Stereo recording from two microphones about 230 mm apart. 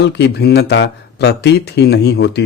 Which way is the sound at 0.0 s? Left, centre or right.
Left.